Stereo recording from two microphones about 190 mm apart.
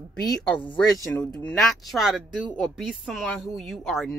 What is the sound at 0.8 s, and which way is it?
Speech, 20° left (ahead or behind).